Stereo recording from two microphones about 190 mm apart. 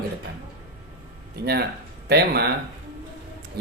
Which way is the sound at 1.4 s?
55° right (ahead or behind).